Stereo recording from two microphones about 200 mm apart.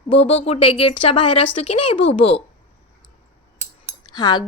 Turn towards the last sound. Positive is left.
turn(degrees=20)  # may be behind; listen again after turning